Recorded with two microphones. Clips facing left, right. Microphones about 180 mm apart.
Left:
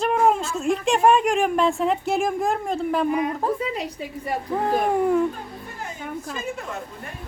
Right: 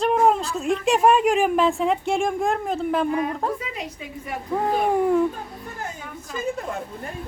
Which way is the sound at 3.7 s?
35° left (ahead or behind).